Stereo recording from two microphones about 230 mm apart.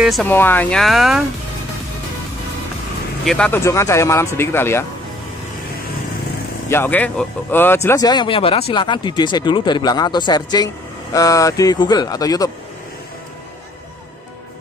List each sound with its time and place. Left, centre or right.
0.0 s speech: centre
3.3 s speech: centre
6.7 s speech: centre